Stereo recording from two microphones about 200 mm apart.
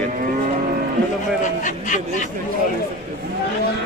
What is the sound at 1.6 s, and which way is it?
Speech, 40° left (ahead or behind).